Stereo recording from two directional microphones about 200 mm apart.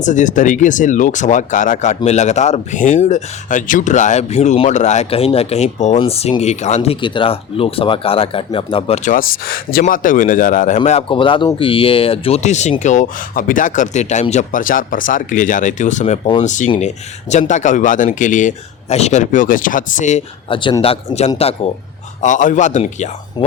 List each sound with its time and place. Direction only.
0.0 s speech: 40° left (ahead or behind)
9.0 s speech: 45° left (ahead or behind)
10.8 s speech: 30° left (ahead or behind)